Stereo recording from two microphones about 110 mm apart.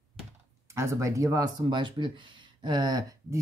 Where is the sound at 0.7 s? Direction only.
25° right (ahead or behind).